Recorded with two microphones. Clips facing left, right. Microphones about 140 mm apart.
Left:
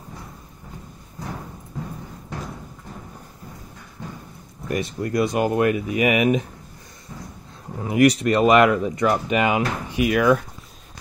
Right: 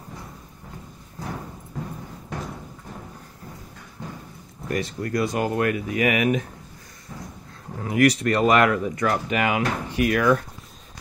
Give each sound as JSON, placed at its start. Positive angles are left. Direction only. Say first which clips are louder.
{"t": 4.6, "sound": "speech", "louder": "left 2 dB", "side_deg": 20}
{"t": 7.8, "sound": "speech", "louder": "left 2 dB", "side_deg": 20}